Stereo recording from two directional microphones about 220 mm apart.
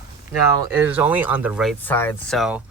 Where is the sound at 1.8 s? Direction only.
10° left (ahead or behind).